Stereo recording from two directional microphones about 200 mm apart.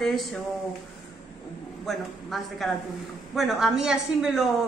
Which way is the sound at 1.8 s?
Centre (ahead or behind).